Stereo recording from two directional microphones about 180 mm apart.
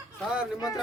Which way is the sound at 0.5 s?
20° left (ahead or behind).